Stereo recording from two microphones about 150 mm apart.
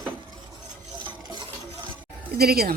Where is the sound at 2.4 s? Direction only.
90° right.